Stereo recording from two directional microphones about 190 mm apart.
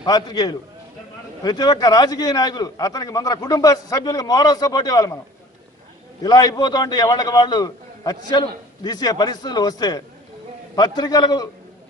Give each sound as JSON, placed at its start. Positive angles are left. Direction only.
{"t": 0.0, "sound": "a man's voice", "side_deg": 20}
{"t": 6.2, "sound": "a man's voice", "side_deg": 20}